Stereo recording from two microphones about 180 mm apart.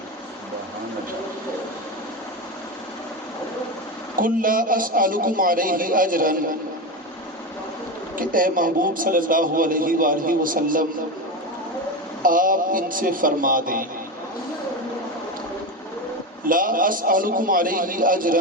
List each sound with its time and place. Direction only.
4.2 s a man's voice: 50° right (ahead or behind)
8.1 s a man's voice: 50° right (ahead or behind)
12.2 s a man's voice: 50° right (ahead or behind)
16.5 s a man's voice: 50° right (ahead or behind)